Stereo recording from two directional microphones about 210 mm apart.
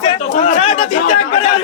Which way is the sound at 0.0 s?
35° left (ahead or behind).